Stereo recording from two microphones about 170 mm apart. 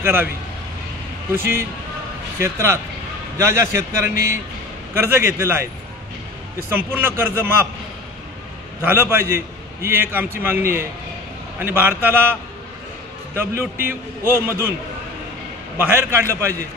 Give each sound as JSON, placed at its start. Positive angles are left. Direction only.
{"t": 0.0, "sound": "a man's voice", "side_deg": -15}
{"t": 1.3, "sound": "a man's voice", "side_deg": -15}
{"t": 6.7, "sound": "a man's voice", "side_deg": -10}
{"t": 8.8, "sound": "a man's voice", "side_deg": -15}
{"t": 13.3, "sound": "a man's voice", "side_deg": -15}
{"t": 15.8, "sound": "a man's voice", "side_deg": -15}